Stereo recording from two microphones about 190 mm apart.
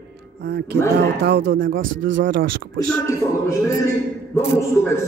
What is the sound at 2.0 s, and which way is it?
Speech, 80° right.